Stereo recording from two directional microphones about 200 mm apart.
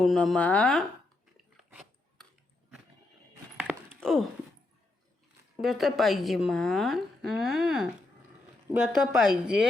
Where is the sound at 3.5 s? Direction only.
5° right (ahead or behind).